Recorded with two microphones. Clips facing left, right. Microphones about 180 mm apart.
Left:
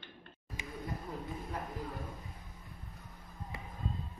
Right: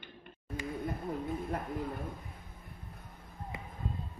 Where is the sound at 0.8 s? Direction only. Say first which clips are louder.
Right 4 dB; 55° right (ahead or behind).